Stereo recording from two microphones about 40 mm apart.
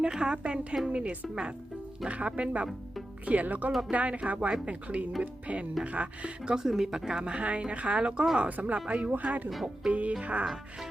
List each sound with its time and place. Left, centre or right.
0.0 s speech: right
3.2 s speech: right
3.7 s speech: centre
3.9 s speech: right
6.6 s speech: centre
8.4 s speech: right
10.4 s speech: centre